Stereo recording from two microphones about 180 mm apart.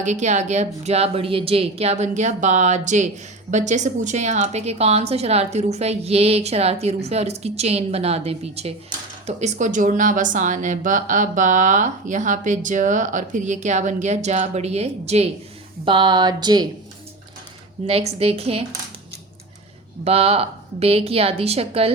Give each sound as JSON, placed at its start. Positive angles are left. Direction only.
{"t": 0.0, "sound": "a woman's voice", "side_deg": -40}
{"t": 17.8, "sound": "a woman's voice", "side_deg": -35}
{"t": 20.1, "sound": "a woman's voice", "side_deg": -35}